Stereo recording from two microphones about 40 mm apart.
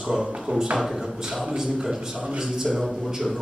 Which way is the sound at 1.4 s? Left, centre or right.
Centre.